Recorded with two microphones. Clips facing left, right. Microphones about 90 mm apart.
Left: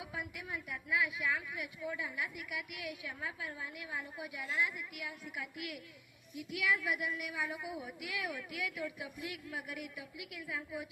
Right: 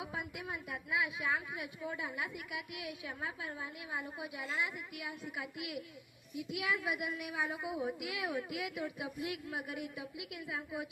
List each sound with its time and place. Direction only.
0.0 s a woman's voice: 25° right (ahead or behind)